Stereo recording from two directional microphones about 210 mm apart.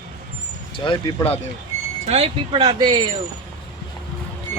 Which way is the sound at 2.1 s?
30° right (ahead or behind).